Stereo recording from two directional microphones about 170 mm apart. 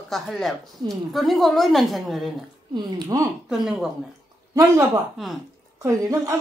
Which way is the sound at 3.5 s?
5° right (ahead or behind).